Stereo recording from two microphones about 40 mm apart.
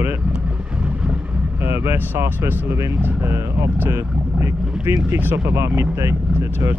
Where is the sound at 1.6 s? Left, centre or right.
Right.